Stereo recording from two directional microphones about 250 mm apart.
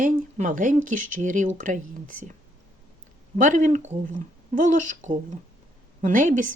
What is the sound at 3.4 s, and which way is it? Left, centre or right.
Speech, right.